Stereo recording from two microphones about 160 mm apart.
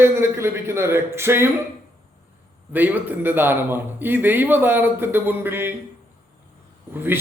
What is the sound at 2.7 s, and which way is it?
A man's voice, 10° right (ahead or behind).